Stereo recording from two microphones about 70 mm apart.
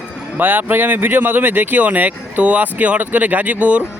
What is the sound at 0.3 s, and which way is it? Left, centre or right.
Speech, right.